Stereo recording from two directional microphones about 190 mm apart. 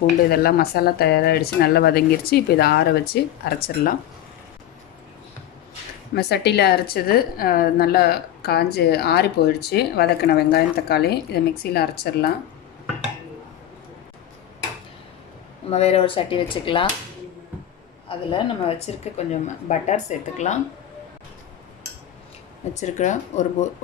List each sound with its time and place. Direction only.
0.3 s a woman's voice: 55° left (ahead or behind)
6.1 s a woman's voice: 60° left (ahead or behind)
15.7 s speech: 35° left (ahead or behind)
18.0 s a woman's voice: 30° left (ahead or behind)
22.8 s a woman's voice: 40° left (ahead or behind)